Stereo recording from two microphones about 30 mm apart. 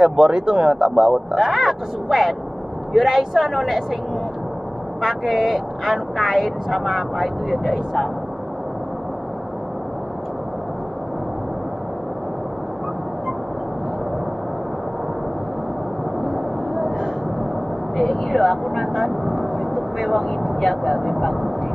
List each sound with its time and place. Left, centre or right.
0.0 s speech: right
1.1 s speech: centre
5.0 s speech: centre
16.3 s vehicle: centre
17.9 s speech: centre
18.8 s vehicle: centre
20.6 s speech: centre